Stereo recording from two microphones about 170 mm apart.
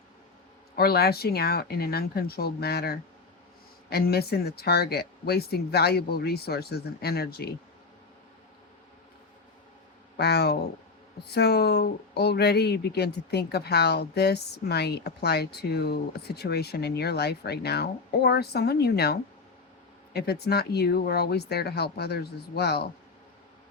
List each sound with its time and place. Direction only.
0.8 s speech: 65° left (ahead or behind)
10.2 s speech: 75° left (ahead or behind)